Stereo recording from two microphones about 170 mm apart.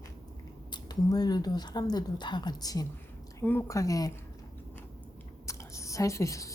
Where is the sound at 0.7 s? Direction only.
25° left (ahead or behind).